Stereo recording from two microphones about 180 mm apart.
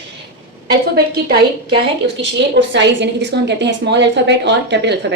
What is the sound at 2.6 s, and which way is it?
A woman's voice, 75° right (ahead or behind).